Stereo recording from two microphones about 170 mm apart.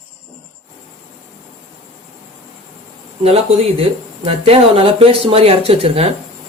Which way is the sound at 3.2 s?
35° right (ahead or behind).